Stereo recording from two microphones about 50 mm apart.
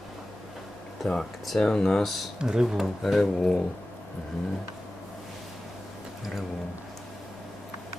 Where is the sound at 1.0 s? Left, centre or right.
Centre.